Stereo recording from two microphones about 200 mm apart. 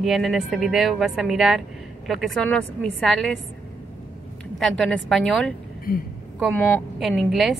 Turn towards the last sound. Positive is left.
turn(degrees=0)  # may be behind; listen again after turning